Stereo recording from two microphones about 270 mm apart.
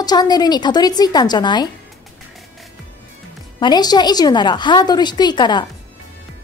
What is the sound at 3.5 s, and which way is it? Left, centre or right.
A woman's voice, centre.